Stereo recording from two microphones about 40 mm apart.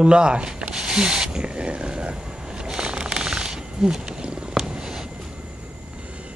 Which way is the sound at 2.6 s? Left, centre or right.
Right.